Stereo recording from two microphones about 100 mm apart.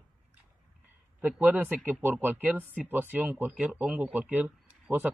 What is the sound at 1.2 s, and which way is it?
Speech, 20° right (ahead or behind).